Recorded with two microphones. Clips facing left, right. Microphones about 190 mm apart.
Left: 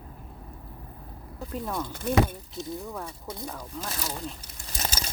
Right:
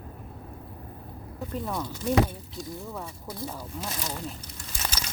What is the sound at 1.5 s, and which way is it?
Speech, centre (ahead or behind).